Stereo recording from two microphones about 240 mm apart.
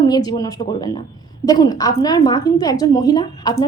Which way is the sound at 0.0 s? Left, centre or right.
Centre.